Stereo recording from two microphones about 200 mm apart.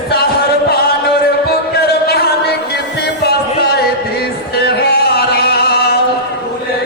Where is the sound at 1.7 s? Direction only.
55° left (ahead or behind).